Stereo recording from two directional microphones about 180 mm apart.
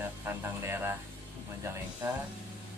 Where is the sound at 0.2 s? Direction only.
15° right (ahead or behind).